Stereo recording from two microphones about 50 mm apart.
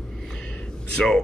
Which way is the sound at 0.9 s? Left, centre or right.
Centre.